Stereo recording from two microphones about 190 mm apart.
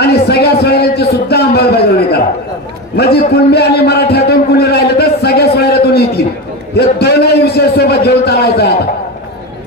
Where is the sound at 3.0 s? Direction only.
55° left (ahead or behind).